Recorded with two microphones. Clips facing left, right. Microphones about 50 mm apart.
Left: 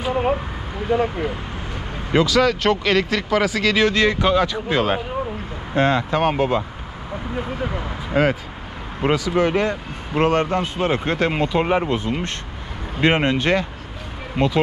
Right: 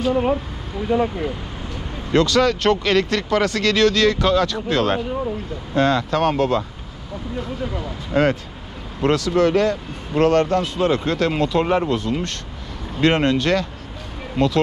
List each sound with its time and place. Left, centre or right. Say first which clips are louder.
2.1 s speech: even; centre
7.3 s speech: left 1 dB; left
9.0 s speech: right 2 dB; centre